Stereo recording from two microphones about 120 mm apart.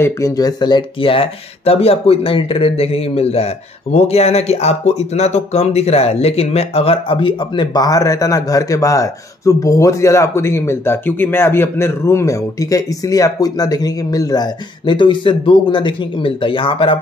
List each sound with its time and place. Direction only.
0.0 s speech: 30° left (ahead or behind); by 17.0 s 45° left (ahead or behind)